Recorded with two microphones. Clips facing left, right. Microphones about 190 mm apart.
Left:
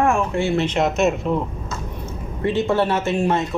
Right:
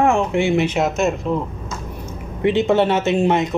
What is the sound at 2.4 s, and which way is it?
Speech, 20° right (ahead or behind).